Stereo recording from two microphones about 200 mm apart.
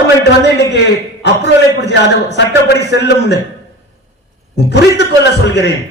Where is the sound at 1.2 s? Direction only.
60° left (ahead or behind).